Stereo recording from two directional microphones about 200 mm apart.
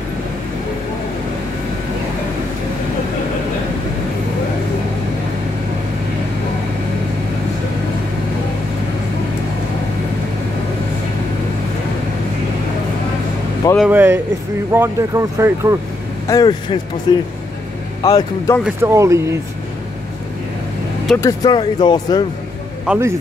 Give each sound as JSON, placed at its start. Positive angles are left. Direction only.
{"t": 13.7, "sound": "a sound", "side_deg": -10}
{"t": 14.7, "sound": "speech", "side_deg": -10}
{"t": 16.3, "sound": "a man's voice", "side_deg": 20}
{"t": 18.6, "sound": "speech", "side_deg": -10}
{"t": 21.2, "sound": "speech", "side_deg": 15}
{"t": 22.8, "sound": "speech", "side_deg": -10}